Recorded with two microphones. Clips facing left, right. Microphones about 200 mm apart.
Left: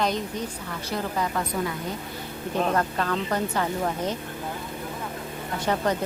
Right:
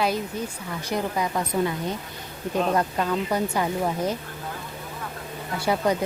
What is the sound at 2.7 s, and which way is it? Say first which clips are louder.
A woman's voice: right 2 dB; 10° right (ahead or behind).